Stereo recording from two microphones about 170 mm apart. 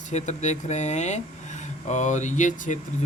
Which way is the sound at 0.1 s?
45° left (ahead or behind).